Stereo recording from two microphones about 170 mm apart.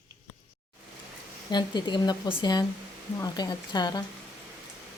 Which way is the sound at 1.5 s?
25° left (ahead or behind).